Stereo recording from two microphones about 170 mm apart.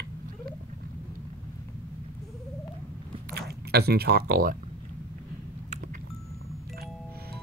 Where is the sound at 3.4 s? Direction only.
70° right (ahead or behind).